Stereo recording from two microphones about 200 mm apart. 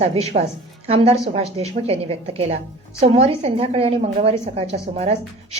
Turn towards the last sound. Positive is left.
turn(degrees=-30)  # may be behind; listen again after turning